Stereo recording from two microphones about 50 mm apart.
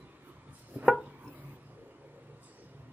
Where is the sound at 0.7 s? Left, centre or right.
Right.